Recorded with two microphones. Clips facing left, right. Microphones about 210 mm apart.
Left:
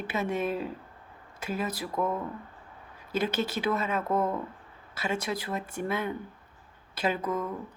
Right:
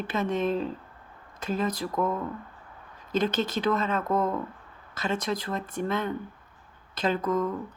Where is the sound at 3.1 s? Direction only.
10° left (ahead or behind).